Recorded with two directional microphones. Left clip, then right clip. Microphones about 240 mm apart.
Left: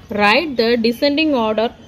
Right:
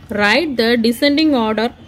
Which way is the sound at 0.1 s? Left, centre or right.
Centre.